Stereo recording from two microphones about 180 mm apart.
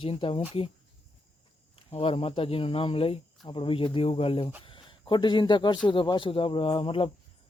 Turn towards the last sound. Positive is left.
turn(degrees=30)  # may be behind; listen again after turning